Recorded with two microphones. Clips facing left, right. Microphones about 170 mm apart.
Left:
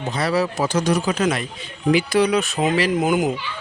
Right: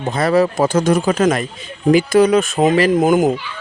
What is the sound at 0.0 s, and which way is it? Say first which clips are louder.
Speech: right 6 dB; 50° right (ahead or behind).